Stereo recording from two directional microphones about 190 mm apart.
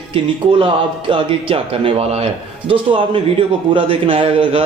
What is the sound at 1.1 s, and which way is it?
A man's voice, 30° right (ahead or behind).